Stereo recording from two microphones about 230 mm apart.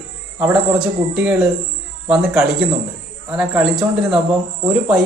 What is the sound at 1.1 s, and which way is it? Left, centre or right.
Speech, centre.